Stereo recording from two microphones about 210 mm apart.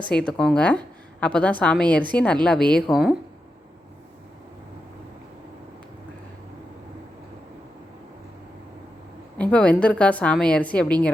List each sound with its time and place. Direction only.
0.1 s a woman's voice: 5° left (ahead or behind)
9.4 s a woman's voice: 5° left (ahead or behind)